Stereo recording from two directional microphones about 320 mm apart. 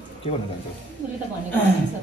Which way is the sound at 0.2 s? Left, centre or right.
Centre.